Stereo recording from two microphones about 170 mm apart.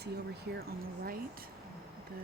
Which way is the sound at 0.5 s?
65° right (ahead or behind).